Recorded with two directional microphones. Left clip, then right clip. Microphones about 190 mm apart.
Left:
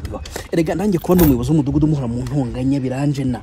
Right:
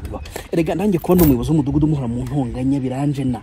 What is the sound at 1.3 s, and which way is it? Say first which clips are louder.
Speech: left 1 dB; 20° right (ahead or behind).